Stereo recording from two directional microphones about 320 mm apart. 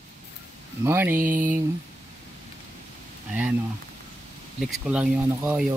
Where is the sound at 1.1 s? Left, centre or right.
Right.